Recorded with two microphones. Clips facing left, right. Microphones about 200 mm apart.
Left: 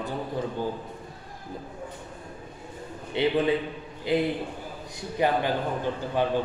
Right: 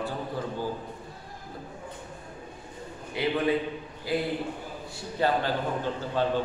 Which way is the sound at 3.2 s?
25° left (ahead or behind).